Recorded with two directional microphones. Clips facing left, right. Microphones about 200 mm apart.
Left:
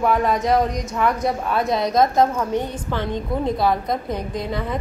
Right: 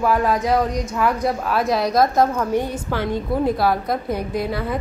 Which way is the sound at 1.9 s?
20° left (ahead or behind).